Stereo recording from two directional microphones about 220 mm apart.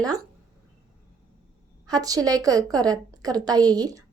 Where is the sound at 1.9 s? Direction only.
15° right (ahead or behind).